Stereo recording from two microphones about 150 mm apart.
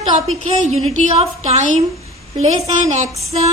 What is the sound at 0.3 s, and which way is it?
A woman's voice, 45° right (ahead or behind).